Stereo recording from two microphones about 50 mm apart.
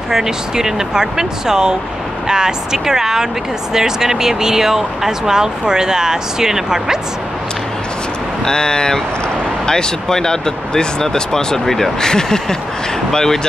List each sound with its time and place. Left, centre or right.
0.1 s speech: centre
8.5 s speech: centre